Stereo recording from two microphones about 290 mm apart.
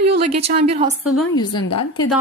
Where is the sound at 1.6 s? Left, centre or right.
Left.